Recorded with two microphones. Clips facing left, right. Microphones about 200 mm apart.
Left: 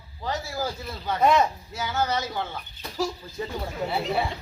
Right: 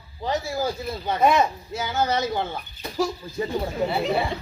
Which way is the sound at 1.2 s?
10° right (ahead or behind).